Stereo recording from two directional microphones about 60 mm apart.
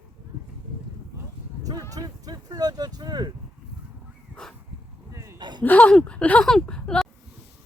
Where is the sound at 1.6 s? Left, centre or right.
Right.